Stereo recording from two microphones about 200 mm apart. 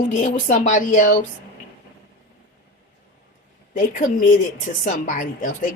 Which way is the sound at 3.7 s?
40° left (ahead or behind).